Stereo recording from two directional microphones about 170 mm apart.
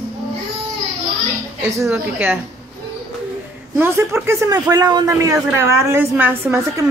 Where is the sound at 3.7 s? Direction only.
15° right (ahead or behind).